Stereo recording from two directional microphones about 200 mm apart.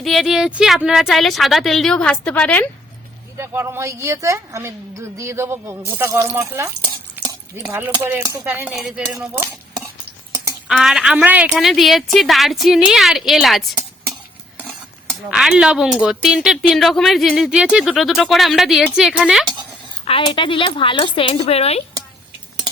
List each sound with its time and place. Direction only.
0.0 s speech: centre (ahead or behind)
3.3 s speech: 10° right (ahead or behind)
7.3 s chopping: 15° right (ahead or behind)
8.2 s speech: 15° right (ahead or behind)
9.0 s speech: 15° right (ahead or behind)
10.7 s speech: centre (ahead or behind)
15.3 s speech: 5° right (ahead or behind)
20.1 s speech: 25° left (ahead or behind)